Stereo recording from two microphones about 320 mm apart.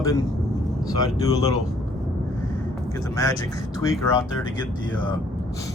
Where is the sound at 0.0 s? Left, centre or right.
Centre.